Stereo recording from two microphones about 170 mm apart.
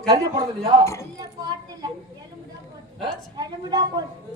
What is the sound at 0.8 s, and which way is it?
Speech, 15° left (ahead or behind).